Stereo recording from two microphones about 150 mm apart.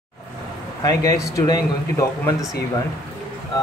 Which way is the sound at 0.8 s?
20° left (ahead or behind).